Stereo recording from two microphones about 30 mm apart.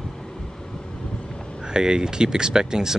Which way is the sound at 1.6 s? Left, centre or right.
Right.